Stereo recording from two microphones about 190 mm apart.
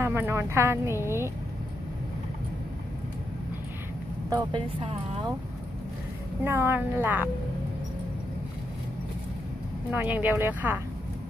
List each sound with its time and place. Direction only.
0.0 s speech: 15° right (ahead or behind)
4.3 s speech: 20° right (ahead or behind)
6.4 s speech: 10° right (ahead or behind)
9.8 s speech: 10° right (ahead or behind)